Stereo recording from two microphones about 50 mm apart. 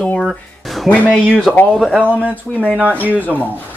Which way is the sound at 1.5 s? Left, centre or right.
Centre.